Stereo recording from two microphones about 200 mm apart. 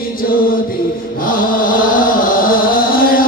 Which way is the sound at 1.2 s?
45° left (ahead or behind).